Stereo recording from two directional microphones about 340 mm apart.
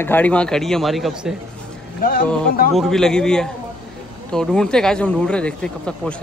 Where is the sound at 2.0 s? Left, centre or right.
Left.